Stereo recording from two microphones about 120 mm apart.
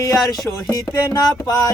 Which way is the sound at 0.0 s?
30° left (ahead or behind).